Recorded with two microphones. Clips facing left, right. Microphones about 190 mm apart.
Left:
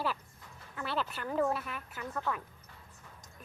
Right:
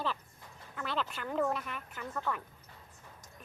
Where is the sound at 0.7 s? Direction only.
10° left (ahead or behind).